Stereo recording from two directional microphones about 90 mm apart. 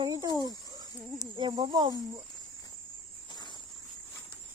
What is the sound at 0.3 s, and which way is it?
Speech, 45° left (ahead or behind).